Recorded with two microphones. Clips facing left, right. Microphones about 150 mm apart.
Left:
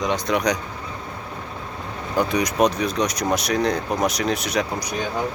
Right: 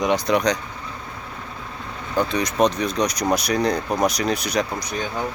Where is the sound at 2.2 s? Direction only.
15° left (ahead or behind).